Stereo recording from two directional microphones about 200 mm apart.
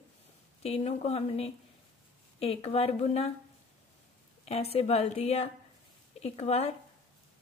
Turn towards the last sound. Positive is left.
turn(degrees=30)  # may be behind; listen again after turning